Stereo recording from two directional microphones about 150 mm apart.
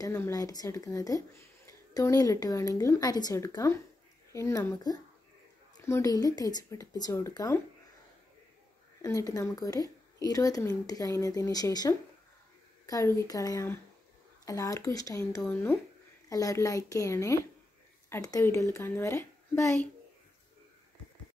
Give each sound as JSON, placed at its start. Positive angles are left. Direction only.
{"t": 0.1, "sound": "speech", "side_deg": 20}
{"t": 9.0, "sound": "a woman's voice", "side_deg": 20}